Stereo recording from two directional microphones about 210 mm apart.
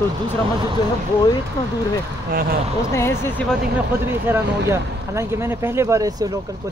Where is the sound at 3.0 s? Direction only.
10° left (ahead or behind).